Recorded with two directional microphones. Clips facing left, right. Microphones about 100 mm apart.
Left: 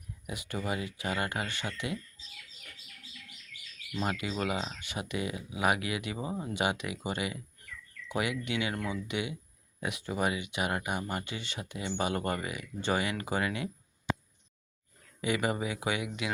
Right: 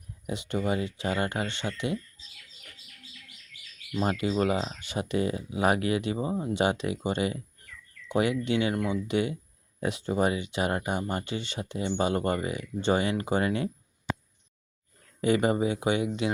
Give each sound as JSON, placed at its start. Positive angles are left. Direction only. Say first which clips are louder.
{"t": 0.3, "sound": "speech", "louder": "right 6 dB", "side_deg": -25}
{"t": 4.0, "sound": "speech", "louder": "right 6 dB", "side_deg": -30}
{"t": 8.7, "sound": "speech", "louder": "right 6 dB", "side_deg": -20}
{"t": 9.0, "sound": "speech", "louder": "right 7 dB", "side_deg": -40}
{"t": 15.2, "sound": "speech", "louder": "right 7 dB", "side_deg": -35}